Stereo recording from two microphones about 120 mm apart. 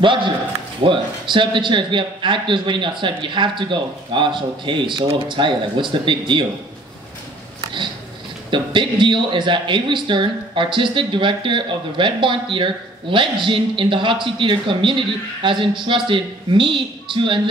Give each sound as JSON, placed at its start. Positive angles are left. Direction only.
{"t": 0.0, "sound": "speech", "side_deg": -45}
{"t": 7.6, "sound": "sniff", "side_deg": -40}
{"t": 8.5, "sound": "speech", "side_deg": -40}